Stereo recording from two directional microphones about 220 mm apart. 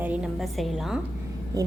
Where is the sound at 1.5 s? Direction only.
15° right (ahead or behind).